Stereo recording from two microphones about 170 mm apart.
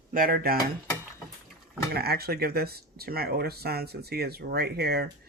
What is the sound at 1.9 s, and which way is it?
Speech, 65° right (ahead or behind).